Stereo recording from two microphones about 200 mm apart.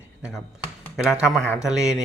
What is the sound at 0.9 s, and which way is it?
Speech, 5° right (ahead or behind).